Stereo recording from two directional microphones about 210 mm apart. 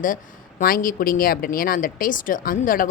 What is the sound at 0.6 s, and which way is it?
Speech, 45° left (ahead or behind).